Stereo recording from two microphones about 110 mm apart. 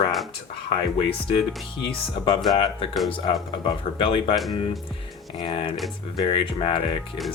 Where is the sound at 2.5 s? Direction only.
50° left (ahead or behind).